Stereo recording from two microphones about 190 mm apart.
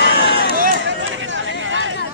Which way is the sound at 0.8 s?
80° right.